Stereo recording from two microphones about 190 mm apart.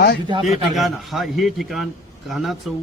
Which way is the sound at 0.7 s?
Centre (ahead or behind).